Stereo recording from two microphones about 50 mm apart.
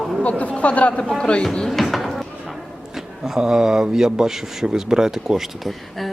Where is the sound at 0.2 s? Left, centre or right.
Left.